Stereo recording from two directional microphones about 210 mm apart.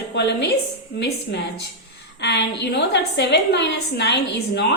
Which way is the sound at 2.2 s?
55° left (ahead or behind).